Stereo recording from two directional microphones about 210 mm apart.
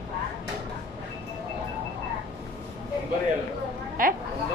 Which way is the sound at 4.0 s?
40° right (ahead or behind).